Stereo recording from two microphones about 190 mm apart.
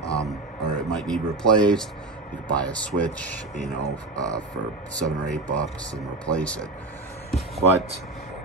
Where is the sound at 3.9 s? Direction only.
20° right (ahead or behind).